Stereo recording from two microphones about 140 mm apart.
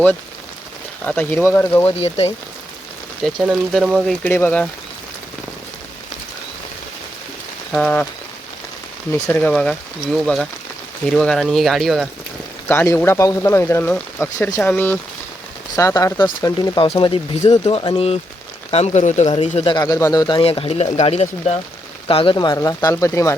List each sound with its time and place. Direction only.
1.0 s speech: 10° left (ahead or behind)
1.9 s speech: 50° left (ahead or behind)
3.4 s speech: 5° right (ahead or behind)
4.2 s speech: 15° left (ahead or behind)
7.7 s speech: 10° left (ahead or behind)
9.3 s speech: 5° left (ahead or behind)
12.6 s speech: 15° left (ahead or behind)
15.7 s speech: 25° left (ahead or behind); by 19.7 s 45° left (ahead or behind)
19.7 s speech: 25° left (ahead or behind); by 21.6 s 50° left (ahead or behind)
22.0 s speech: 40° left (ahead or behind); by 23.3 s 20° left (ahead or behind)